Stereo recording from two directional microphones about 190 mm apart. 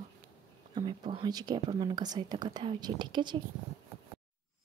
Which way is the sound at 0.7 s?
25° right (ahead or behind).